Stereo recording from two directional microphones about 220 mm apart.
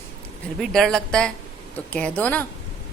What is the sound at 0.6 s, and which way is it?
A woman's voice, centre (ahead or behind).